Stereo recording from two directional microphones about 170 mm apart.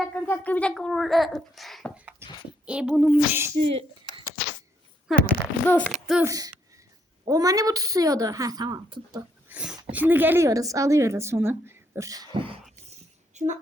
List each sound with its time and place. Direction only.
0.0 s a child's voice: 10° left (ahead or behind)
3.5 s speech: 35° right (ahead or behind)
5.1 s a child's voice: centre (ahead or behind)
6.2 s a woman's voice: 20° right (ahead or behind)
9.5 s a woman's voice: 5° right (ahead or behind); by 12.5 s 30° right (ahead or behind)
13.3 s speech: 45° right (ahead or behind)